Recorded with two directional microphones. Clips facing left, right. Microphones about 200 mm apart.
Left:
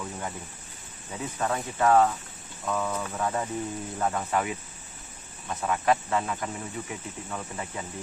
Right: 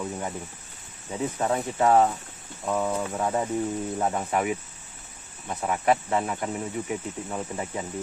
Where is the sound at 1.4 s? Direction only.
25° right (ahead or behind).